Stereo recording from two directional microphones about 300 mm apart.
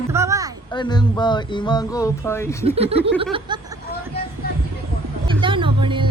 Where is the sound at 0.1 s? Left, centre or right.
Centre.